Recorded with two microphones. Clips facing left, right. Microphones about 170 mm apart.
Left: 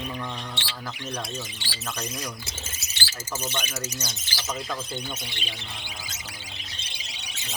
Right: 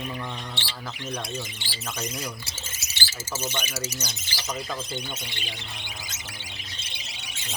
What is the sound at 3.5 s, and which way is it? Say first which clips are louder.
Speech: even; 5° left (ahead or behind).